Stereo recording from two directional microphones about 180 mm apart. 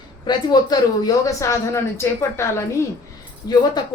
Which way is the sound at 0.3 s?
25° left (ahead or behind).